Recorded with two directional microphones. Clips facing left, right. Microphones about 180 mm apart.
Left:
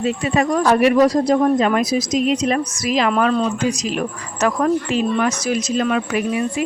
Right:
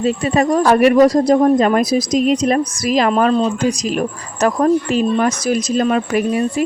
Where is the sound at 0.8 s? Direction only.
50° right (ahead or behind).